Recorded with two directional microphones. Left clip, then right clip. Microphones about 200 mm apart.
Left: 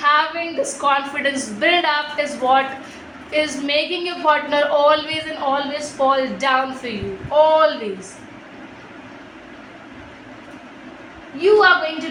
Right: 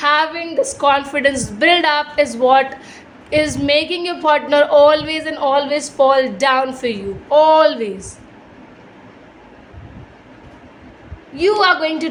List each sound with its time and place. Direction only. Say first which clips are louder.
0.0 s a woman's voice: right 1 dB; 55° right (ahead or behind)